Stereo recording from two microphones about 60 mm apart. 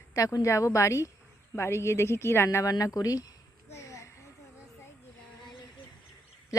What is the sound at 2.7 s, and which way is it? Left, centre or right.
Speech, left.